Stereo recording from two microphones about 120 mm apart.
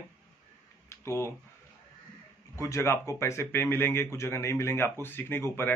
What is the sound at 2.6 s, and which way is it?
Speech, 25° left (ahead or behind).